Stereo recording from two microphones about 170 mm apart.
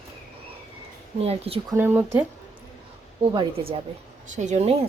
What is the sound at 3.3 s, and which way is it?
Speech, 30° right (ahead or behind).